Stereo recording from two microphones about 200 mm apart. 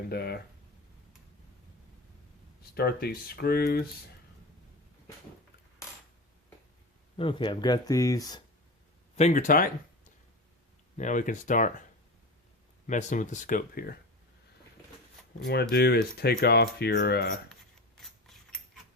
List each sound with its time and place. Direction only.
0.1 s speech: 50° left (ahead or behind)
2.7 s speech: 50° left (ahead or behind)
7.2 s speech: 25° left (ahead or behind)
9.1 s speech: 35° left (ahead or behind)
10.9 s speech: 40° left (ahead or behind)
12.9 s speech: 40° left (ahead or behind)
15.7 s speech: 55° left (ahead or behind)